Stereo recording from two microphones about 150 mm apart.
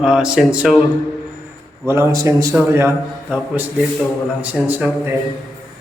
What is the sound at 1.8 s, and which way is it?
A man's voice, 15° right (ahead or behind).